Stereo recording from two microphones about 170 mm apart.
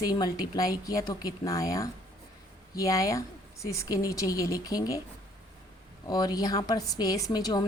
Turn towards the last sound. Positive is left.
turn(degrees=20)  # may be behind; listen again after turning